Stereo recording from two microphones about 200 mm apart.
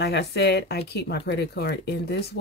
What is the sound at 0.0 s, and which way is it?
Speech, 55° left (ahead or behind).